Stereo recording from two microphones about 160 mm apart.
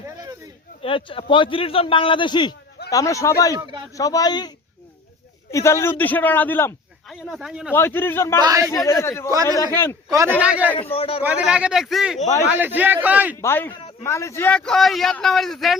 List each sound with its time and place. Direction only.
0.8 s a man's voice: 35° left (ahead or behind); by 6.7 s 15° left (ahead or behind)
7.1 s a man's voice: centre (ahead or behind)
7.7 s a man's voice: 15° left (ahead or behind)
8.4 s speech: 20° right (ahead or behind)
8.7 s a man's voice: 20° left (ahead or behind)
10.4 s a man's voice: 5° right (ahead or behind)
10.9 s a man's voice: 35° left (ahead or behind)
11.2 s a man's voice: 10° right (ahead or behind)
12.5 s a man's voice: 10° right (ahead or behind)
13.4 s a man's voice: 15° left (ahead or behind)